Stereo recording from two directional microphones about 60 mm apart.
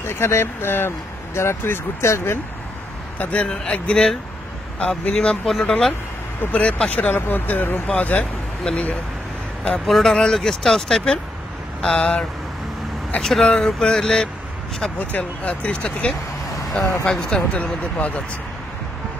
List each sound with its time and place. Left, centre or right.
0.0 s speech: left
3.2 s speech: left
5.1 s speech: centre
6.4 s speech: left
9.8 s speech: centre
11.8 s speech: centre
13.2 s speech: centre
15.0 s speech: left